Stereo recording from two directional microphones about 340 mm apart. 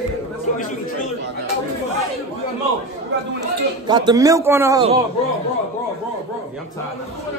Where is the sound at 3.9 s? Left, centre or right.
Centre.